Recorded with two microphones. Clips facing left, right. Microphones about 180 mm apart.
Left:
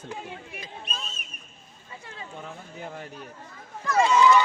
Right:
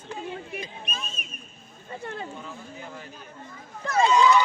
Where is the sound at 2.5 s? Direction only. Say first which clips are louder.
Left 1 dB; 60° left (ahead or behind).